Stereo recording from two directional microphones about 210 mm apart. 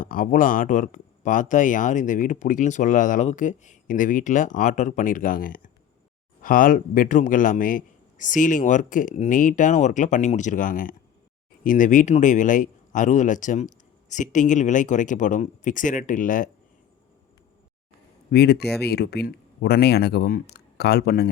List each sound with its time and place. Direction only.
0.0 s speech: 40° left (ahead or behind)
18.3 s speech: 50° left (ahead or behind)